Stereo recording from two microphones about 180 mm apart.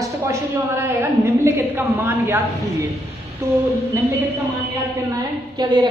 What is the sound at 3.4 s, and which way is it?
Speech, 15° right (ahead or behind).